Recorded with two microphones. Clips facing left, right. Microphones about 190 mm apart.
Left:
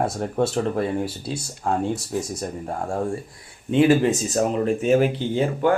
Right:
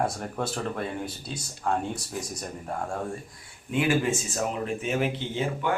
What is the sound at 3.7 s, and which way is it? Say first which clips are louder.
A man's voice: left 8 dB; 30° left (ahead or behind).